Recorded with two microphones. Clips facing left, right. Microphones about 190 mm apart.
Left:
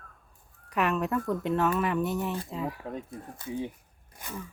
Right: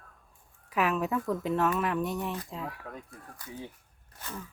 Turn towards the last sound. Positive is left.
turn(degrees=15)  # may be behind; listen again after turning